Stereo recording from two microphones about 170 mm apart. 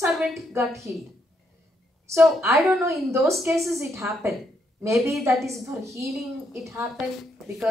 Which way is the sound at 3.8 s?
15° right (ahead or behind).